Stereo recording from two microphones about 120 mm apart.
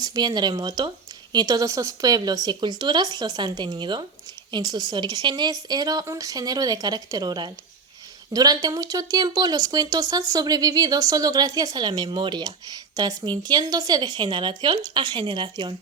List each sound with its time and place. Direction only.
0.0 s speech: 35° right (ahead or behind)